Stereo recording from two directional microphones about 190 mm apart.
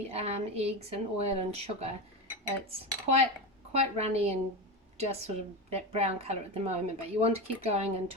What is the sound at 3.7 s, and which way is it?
A woman's voice, 35° right (ahead or behind).